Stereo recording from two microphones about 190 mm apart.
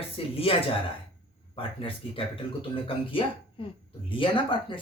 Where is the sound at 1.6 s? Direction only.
30° left (ahead or behind).